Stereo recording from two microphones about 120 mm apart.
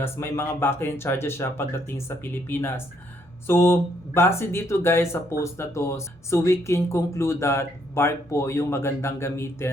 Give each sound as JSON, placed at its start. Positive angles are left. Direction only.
{"t": 0.0, "sound": "speech", "side_deg": 20}